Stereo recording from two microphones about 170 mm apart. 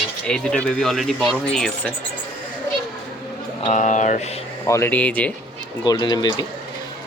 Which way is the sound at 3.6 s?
45° left (ahead or behind).